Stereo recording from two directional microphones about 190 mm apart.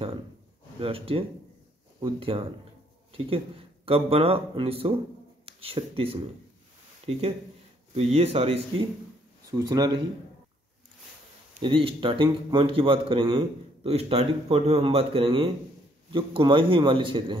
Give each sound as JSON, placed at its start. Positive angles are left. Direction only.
{"t": 0.7, "sound": "speech", "side_deg": -30}
{"t": 9.5, "sound": "speech", "side_deg": -20}
{"t": 11.6, "sound": "speech", "side_deg": -25}